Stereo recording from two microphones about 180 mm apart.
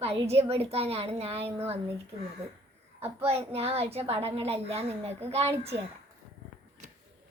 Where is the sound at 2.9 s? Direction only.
35° right (ahead or behind).